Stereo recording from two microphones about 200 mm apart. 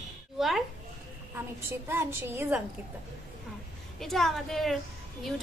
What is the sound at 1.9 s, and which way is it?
Speech, 10° right (ahead or behind).